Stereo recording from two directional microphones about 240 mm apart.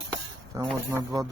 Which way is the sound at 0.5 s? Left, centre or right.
Centre.